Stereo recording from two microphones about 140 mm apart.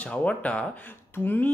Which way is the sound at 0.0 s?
10° left (ahead or behind).